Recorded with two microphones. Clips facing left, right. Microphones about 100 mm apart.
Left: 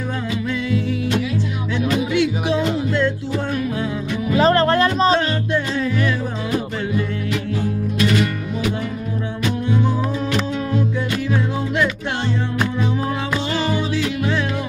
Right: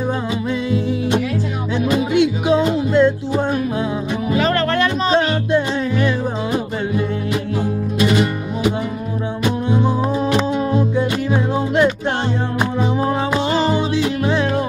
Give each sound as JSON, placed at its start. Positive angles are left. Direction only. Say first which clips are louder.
{"t": 1.8, "sound": "music", "louder": "right 3 dB", "side_deg": -20}
{"t": 4.4, "sound": "music", "louder": "left 3 dB", "side_deg": 30}
{"t": 5.3, "sound": "music", "louder": "right 4 dB", "side_deg": -25}
{"t": 8.0, "sound": "music", "louder": "right 2 dB", "side_deg": -25}
{"t": 13.0, "sound": "music", "louder": "right 4 dB", "side_deg": -30}